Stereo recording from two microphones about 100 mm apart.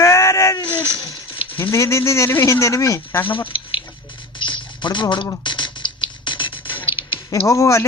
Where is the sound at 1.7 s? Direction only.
30° left (ahead or behind).